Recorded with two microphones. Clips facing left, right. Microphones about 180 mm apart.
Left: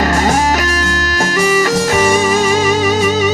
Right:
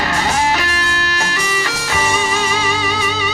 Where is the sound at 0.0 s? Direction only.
45° left (ahead or behind).